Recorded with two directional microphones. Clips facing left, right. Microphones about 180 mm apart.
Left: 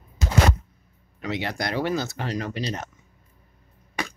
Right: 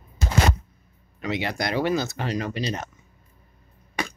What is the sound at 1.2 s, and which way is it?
Speech, 15° right (ahead or behind).